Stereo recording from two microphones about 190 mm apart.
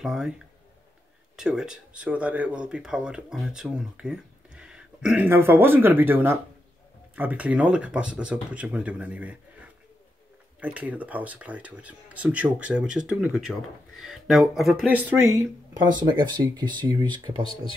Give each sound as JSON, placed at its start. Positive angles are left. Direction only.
{"t": 0.0, "sound": "speech", "side_deg": -5}
{"t": 1.3, "sound": "speech", "side_deg": -5}
{"t": 17.4, "sound": "speech", "side_deg": 30}